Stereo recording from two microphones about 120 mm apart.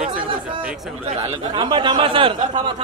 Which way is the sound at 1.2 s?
40° right (ahead or behind).